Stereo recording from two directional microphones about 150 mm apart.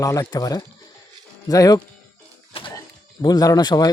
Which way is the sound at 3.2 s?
25° left (ahead or behind).